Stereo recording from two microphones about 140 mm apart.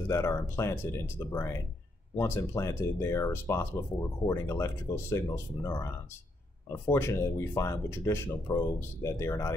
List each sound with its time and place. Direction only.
0.1 s speech: 20° left (ahead or behind)